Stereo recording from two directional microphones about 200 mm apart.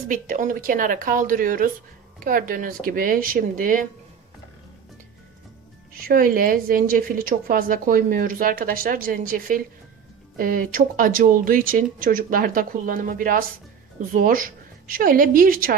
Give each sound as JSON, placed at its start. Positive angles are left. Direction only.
{"t": 0.1, "sound": "a woman's voice", "side_deg": -40}
{"t": 5.9, "sound": "a woman's voice", "side_deg": -45}